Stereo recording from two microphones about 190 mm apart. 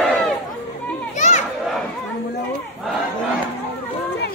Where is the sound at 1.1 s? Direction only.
40° left (ahead or behind).